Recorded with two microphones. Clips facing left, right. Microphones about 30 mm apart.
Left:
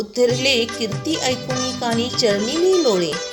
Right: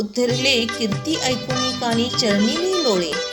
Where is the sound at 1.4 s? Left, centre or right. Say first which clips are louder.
Right 1 dB; right.